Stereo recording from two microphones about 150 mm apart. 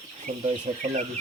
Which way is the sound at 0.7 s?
50° right (ahead or behind).